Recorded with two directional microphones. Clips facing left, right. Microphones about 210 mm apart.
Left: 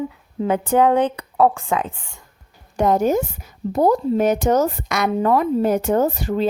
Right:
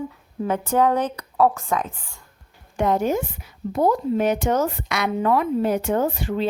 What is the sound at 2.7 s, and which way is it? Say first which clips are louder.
A woman's voice: left 4 dB; 40° left (ahead or behind).